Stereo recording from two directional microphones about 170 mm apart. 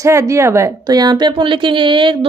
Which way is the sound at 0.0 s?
15° right (ahead or behind).